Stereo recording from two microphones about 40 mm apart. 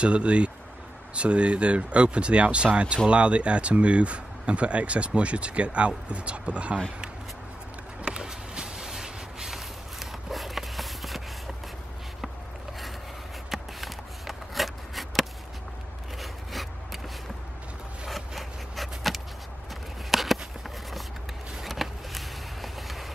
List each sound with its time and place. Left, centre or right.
0.0 s speech: right
8.0 s a sound: centre
13.5 s shuffling cards: centre
16.2 s rub: centre
18.0 s a sound: centre
21.5 s vehicle: centre